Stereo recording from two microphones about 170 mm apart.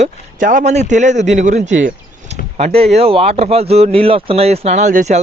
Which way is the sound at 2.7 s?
35° right (ahead or behind).